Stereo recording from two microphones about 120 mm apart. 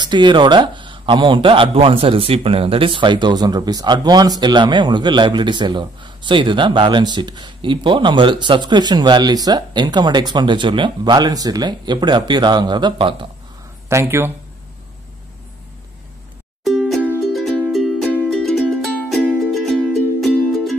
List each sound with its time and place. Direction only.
0.0 s a man's voice: 40° right (ahead or behind)
13.8 s speech: 20° right (ahead or behind)
16.6 s music: centre (ahead or behind)